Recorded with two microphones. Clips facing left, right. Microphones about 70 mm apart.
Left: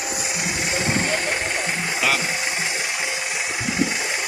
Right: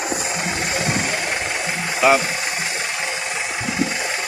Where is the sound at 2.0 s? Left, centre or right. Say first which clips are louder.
Right 8 dB; right.